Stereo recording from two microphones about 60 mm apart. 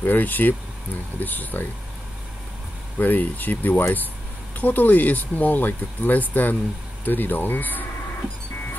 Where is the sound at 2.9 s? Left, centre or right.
Left.